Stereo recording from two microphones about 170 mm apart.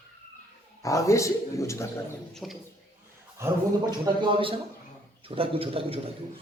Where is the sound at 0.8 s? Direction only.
20° left (ahead or behind).